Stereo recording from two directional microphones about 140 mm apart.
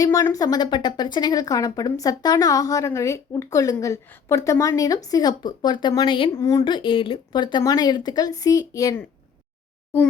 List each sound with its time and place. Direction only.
0.0 s speech: 20° left (ahead or behind)
6.4 s speech: 25° left (ahead or behind)